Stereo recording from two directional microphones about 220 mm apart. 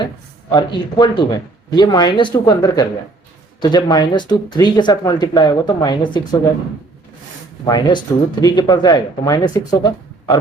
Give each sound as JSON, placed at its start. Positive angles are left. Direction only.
{"t": 0.5, "sound": "speech", "side_deg": 20}
{"t": 7.6, "sound": "speech", "side_deg": 20}